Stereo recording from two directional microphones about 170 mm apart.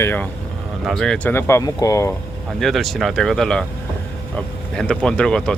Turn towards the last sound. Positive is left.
turn(degrees=5)  # may be behind; listen again after turning